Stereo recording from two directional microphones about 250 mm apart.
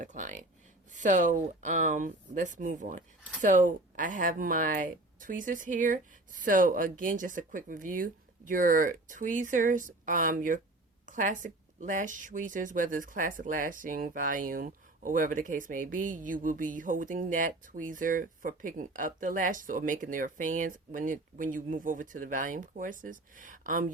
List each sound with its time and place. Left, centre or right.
0.0 s speech: right